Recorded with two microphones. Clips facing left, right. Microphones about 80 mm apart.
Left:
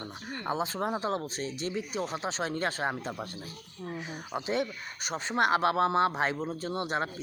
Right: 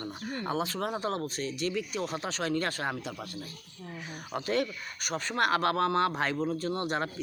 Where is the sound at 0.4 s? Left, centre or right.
Left.